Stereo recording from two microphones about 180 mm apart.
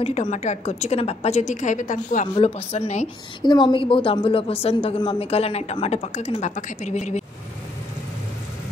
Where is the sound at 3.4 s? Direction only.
25° left (ahead or behind); by 7.2 s 40° left (ahead or behind).